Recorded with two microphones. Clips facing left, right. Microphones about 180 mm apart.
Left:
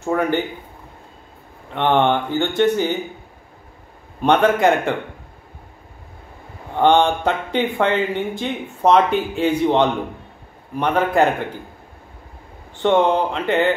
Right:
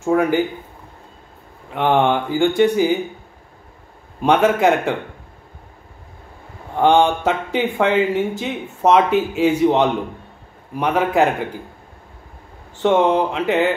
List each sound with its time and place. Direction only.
0.0 s speech: 5° right (ahead or behind)
1.7 s speech: 5° right (ahead or behind)
4.2 s speech: 5° right (ahead or behind)
6.8 s speech: 5° right (ahead or behind)
12.8 s speech: 5° right (ahead or behind)